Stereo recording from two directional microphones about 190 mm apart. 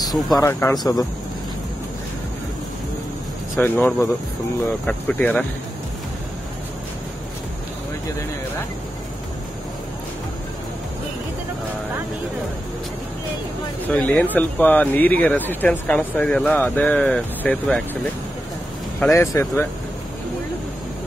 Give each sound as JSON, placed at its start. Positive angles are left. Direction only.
{"t": 0.4, "sound": "speech", "side_deg": 15}
{"t": 3.5, "sound": "speech", "side_deg": 10}
{"t": 13.8, "sound": "speech", "side_deg": 10}
{"t": 18.9, "sound": "speech", "side_deg": 10}